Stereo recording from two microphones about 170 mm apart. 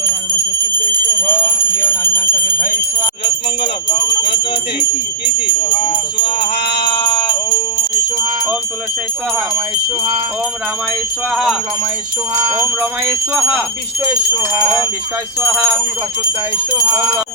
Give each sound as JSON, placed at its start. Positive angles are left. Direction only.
{"t": 0.0, "sound": "bell", "side_deg": 10}
{"t": 1.5, "sound": "bell", "side_deg": 55}
{"t": 2.1, "sound": "jingle bell", "side_deg": 10}
{"t": 3.6, "sound": "speech", "side_deg": 25}
{"t": 5.6, "sound": "jingle bell", "side_deg": 30}
{"t": 6.1, "sound": "music", "side_deg": 30}
{"t": 6.8, "sound": "jingle bell", "side_deg": 30}
{"t": 11.3, "sound": "speech", "side_deg": -5}
{"t": 12.3, "sound": "jingle bell", "side_deg": -10}
{"t": 13.3, "sound": "speech", "side_deg": -5}
{"t": 14.5, "sound": "jingle bell", "side_deg": -15}